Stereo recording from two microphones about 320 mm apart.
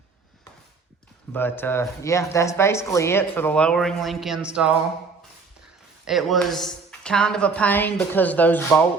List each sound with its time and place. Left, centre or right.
1.3 s speech: centre
6.1 s speech: centre